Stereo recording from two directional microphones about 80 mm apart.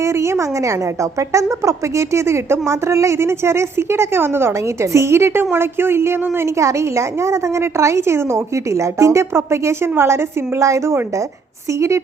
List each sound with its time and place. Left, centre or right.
0.0 s a woman's voice: right